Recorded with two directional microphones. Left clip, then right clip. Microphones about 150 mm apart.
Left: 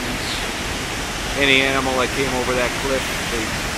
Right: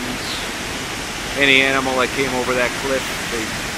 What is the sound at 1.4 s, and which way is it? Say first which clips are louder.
Speech: right 2 dB; 5° right (ahead or behind).